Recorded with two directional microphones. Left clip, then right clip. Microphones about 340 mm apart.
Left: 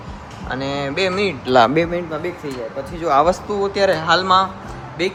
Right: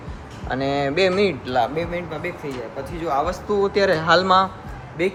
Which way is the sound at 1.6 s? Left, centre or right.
Left.